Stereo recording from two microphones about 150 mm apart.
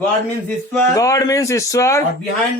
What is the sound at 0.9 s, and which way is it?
A man's voice, 20° left (ahead or behind).